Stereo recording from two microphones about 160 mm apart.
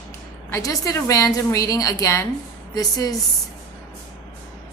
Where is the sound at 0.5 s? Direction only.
20° left (ahead or behind).